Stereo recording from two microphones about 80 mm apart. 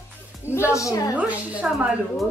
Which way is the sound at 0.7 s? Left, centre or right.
Left.